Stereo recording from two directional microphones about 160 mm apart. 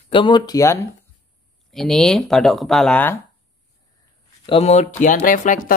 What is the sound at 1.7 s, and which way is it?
Speech, centre (ahead or behind).